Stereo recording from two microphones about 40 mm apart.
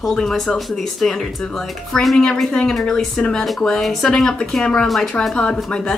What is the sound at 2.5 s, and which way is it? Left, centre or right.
Speech, centre.